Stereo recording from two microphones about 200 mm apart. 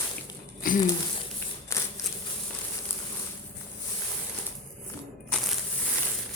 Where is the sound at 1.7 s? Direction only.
15° left (ahead or behind).